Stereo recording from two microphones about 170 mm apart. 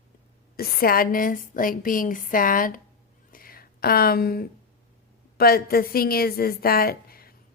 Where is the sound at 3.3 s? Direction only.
60° left (ahead or behind).